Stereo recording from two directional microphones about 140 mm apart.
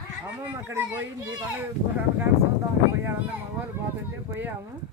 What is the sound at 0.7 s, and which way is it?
Speech, 15° right (ahead or behind).